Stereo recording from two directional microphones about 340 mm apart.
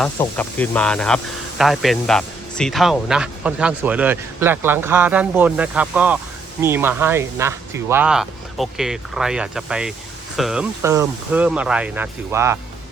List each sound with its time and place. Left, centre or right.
0.0 s speech: centre